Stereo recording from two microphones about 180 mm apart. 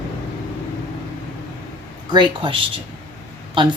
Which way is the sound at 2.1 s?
25° right (ahead or behind).